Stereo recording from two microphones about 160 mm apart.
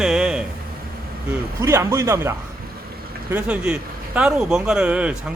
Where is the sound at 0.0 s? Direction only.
5° right (ahead or behind).